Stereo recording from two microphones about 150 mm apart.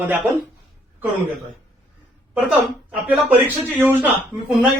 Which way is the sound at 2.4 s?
5° right (ahead or behind).